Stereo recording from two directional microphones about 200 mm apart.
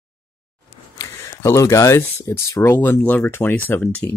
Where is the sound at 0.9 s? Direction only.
15° left (ahead or behind).